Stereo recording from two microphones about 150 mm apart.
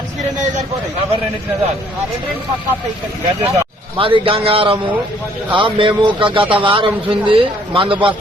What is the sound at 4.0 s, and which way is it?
Speech, 35° right (ahead or behind).